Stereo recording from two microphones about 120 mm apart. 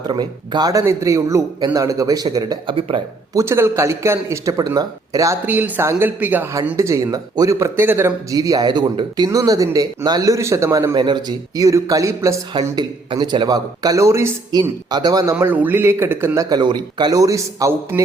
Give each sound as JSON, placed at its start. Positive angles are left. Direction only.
{"t": 0.1, "sound": "speech", "side_deg": -35}
{"t": 3.3, "sound": "speech", "side_deg": -20}
{"t": 5.5, "sound": "speech", "side_deg": -15}
{"t": 10.9, "sound": "speech", "side_deg": -40}
{"t": 12.7, "sound": "speech", "side_deg": -35}
{"t": 14.6, "sound": "speech", "side_deg": -35}
{"t": 15.4, "sound": "speech", "side_deg": -15}